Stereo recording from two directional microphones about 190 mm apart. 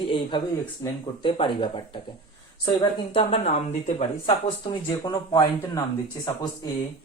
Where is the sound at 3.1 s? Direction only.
30° left (ahead or behind).